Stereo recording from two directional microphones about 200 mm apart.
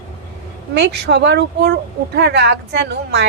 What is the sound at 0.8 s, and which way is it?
Speech, 60° right (ahead or behind).